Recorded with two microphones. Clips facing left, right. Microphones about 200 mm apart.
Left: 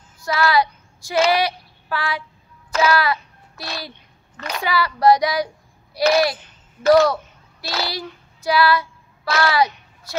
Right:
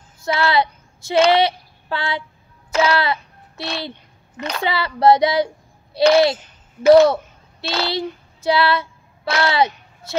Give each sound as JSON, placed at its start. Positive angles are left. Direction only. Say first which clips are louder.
{"t": 0.2, "sound": "speech", "louder": "even", "side_deg": -25}
{"t": 1.3, "sound": "child singing", "louder": "right 4 dB", "side_deg": -25}
{"t": 2.7, "sound": "a sound", "louder": "even", "side_deg": -25}
{"t": 4.4, "sound": "a child's voice", "louder": "even", "side_deg": -25}
{"t": 7.6, "sound": "child singing", "louder": "right 4 dB", "side_deg": -25}